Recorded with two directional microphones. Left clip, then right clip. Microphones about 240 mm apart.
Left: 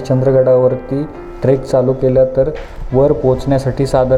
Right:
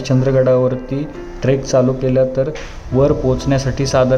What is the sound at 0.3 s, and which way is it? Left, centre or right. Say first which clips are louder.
A man's voice: left 4 dB; centre.